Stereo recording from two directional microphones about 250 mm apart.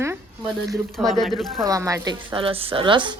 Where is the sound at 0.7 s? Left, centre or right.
Centre.